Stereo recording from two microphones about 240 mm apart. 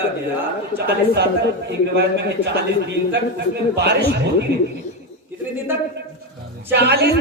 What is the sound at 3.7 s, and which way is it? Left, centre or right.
Speech, right.